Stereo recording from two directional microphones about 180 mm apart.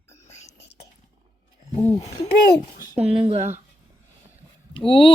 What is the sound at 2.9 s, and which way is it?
Speech, 35° right (ahead or behind).